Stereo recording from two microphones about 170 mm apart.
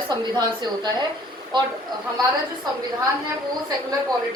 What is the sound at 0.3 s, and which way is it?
A woman's voice, 25° right (ahead or behind).